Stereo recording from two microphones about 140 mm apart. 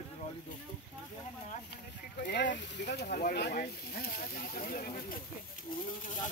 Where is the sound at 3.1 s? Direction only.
90° left.